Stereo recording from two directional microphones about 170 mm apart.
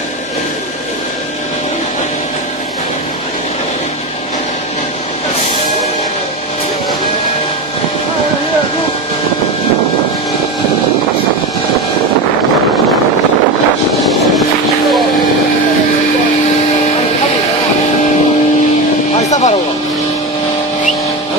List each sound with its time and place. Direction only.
19.2 s vehicle: 45° left (ahead or behind)